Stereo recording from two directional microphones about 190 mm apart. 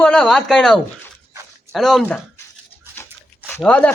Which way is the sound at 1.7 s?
Centre (ahead or behind).